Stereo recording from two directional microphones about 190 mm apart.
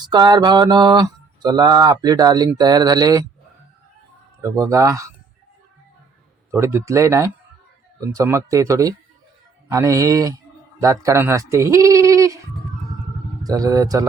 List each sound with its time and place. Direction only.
0.0 s mantra: 20° right (ahead or behind)
4.4 s speech: 15° right (ahead or behind)
6.5 s a man's voice: 15° right (ahead or behind)
13.4 s mantra: 20° right (ahead or behind)